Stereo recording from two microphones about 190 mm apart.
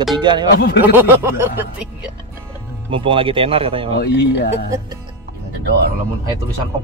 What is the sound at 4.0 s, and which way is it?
Speech, 65° left (ahead or behind).